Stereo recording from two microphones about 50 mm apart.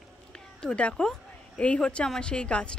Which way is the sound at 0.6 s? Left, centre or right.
Left.